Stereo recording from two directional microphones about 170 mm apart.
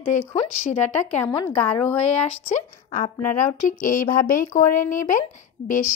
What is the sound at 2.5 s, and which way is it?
Speech, 45° left (ahead or behind).